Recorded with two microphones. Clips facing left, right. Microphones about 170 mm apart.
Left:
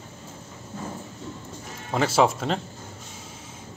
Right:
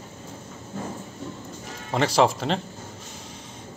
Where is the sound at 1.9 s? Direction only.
Centre (ahead or behind).